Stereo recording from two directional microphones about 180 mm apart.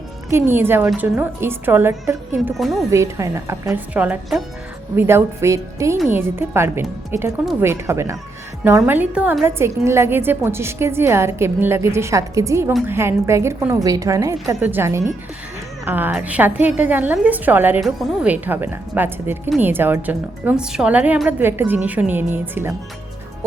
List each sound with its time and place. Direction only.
0.3 s a woman's voice: 15° right (ahead or behind)